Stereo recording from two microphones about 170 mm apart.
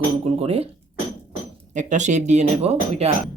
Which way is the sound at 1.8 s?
45° right (ahead or behind).